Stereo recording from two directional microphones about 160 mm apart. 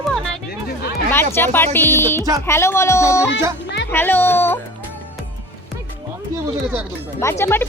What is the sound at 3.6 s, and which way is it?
Music, 90° left.